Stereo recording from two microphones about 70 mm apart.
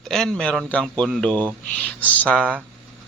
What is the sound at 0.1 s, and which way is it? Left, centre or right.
Speech, centre.